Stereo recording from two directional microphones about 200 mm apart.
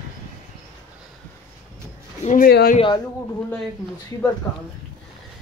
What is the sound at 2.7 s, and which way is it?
Speech, 25° left (ahead or behind).